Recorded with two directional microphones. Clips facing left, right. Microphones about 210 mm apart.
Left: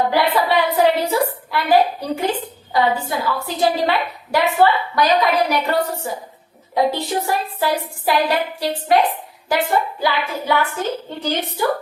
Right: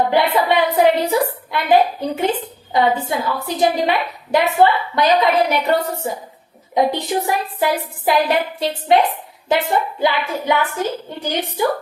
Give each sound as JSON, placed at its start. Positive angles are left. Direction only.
{"t": 0.1, "sound": "a woman's voice", "side_deg": -20}